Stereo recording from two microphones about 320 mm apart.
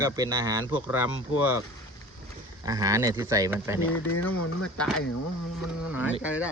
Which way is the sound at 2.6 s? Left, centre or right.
Centre.